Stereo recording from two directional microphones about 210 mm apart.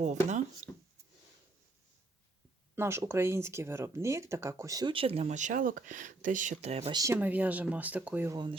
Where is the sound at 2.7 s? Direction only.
10° right (ahead or behind); by 6.9 s 30° right (ahead or behind).